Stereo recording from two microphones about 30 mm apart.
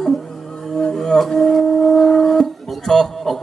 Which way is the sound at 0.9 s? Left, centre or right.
Centre.